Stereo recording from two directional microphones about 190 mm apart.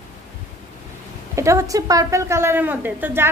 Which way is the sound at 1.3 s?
15° right (ahead or behind).